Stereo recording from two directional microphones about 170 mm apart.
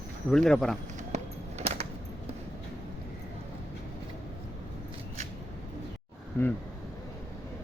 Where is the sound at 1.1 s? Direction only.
40° right (ahead or behind).